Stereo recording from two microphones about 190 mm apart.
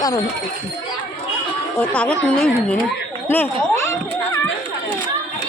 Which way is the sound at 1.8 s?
5° left (ahead or behind).